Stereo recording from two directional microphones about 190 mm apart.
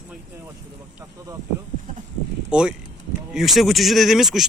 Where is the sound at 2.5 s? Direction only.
5° right (ahead or behind).